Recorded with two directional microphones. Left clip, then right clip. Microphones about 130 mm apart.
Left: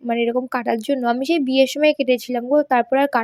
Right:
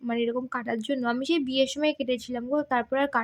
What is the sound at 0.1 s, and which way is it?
Speech, 40° left (ahead or behind).